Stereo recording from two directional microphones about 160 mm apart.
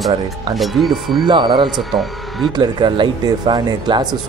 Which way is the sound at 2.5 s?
30° right (ahead or behind).